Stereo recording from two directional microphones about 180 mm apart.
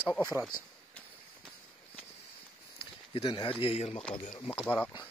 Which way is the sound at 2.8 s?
30° left (ahead or behind).